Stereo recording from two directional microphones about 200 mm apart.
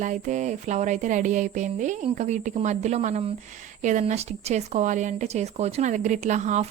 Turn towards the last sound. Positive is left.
turn(degrees=-35)  # may be behind; listen again after turning